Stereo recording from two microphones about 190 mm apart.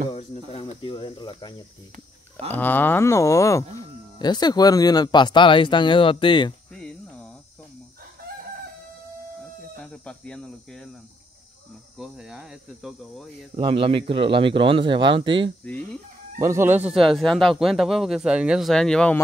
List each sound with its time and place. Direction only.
0.1 s speech: 35° left (ahead or behind)
2.5 s speech: 10° left (ahead or behind); by 6.5 s 25° left (ahead or behind)
6.7 s cricket: 5° left (ahead or behind)
9.8 s speech: 5° left (ahead or behind)
12.0 s speech: 5° right (ahead or behind)
13.6 s speech: 30° right (ahead or behind)
15.6 s speech: 5° left (ahead or behind)
16.3 s speech: 15° right (ahead or behind); by 19.1 s 5° left (ahead or behind)